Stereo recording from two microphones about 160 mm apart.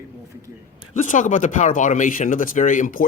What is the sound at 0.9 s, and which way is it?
Speech, 50° left (ahead or behind).